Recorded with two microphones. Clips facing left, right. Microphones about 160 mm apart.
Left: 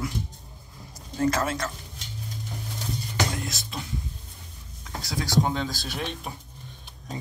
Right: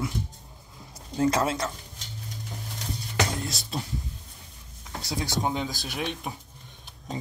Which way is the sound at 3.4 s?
35° right (ahead or behind).